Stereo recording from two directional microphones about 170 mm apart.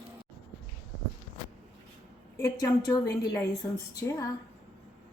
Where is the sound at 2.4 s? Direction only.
20° left (ahead or behind).